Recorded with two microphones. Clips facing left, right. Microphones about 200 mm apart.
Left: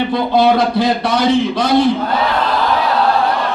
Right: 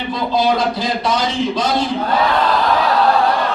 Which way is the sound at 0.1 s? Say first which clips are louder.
Left 1 dB; 60° left (ahead or behind).